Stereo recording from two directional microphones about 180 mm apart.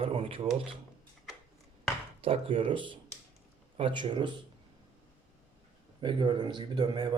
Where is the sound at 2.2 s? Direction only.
30° right (ahead or behind).